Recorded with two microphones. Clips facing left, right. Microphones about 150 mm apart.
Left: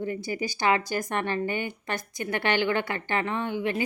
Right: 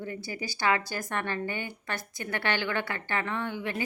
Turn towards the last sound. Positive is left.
turn(degrees=15)  # may be behind; listen again after turning